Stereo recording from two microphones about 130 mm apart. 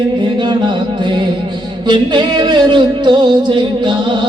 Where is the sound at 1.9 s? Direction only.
35° right (ahead or behind).